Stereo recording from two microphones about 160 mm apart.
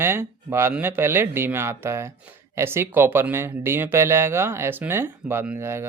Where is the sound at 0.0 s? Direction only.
15° right (ahead or behind).